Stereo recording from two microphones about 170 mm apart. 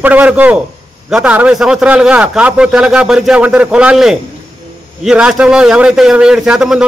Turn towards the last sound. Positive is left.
turn(degrees=-5)  # may be behind; listen again after turning